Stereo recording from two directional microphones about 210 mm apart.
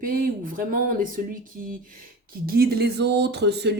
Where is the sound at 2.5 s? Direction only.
45° right (ahead or behind).